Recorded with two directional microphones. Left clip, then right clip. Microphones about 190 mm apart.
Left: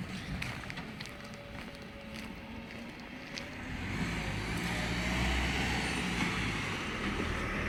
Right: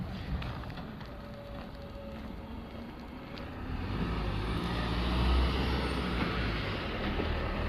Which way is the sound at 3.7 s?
15° left (ahead or behind).